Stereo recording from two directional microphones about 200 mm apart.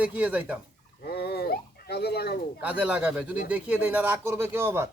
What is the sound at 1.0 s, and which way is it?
Speech, 50° left (ahead or behind).